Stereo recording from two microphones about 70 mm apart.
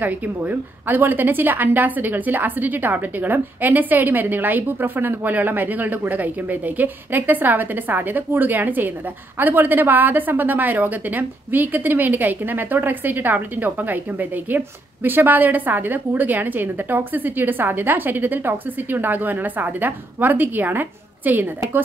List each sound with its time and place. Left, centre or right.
0.0 s a woman's voice: right